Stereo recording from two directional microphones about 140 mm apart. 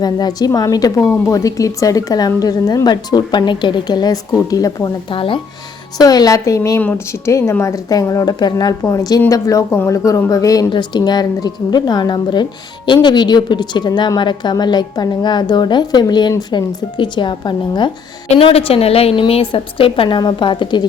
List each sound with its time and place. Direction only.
0.0 s a woman's voice: 30° left (ahead or behind)
5.1 s speech: 40° left (ahead or behind)
6.0 s a woman's voice: 25° left (ahead or behind)